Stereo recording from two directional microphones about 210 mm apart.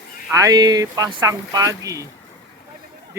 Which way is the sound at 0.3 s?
15° right (ahead or behind).